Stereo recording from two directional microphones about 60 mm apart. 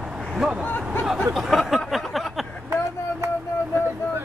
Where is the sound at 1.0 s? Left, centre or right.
Centre.